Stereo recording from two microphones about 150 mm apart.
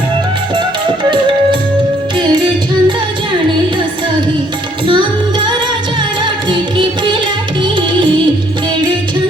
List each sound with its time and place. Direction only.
2.1 s music: 30° right (ahead or behind)
6.2 s music: 30° right (ahead or behind)